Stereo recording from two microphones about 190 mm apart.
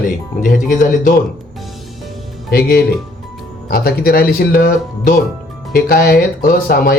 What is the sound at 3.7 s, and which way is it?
Speech, 55° left (ahead or behind).